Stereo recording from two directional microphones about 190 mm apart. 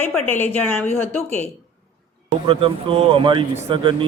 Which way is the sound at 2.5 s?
30° right (ahead or behind).